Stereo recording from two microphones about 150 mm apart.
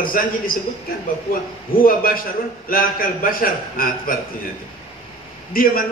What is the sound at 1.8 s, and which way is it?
A man's voice, 70° left (ahead or behind).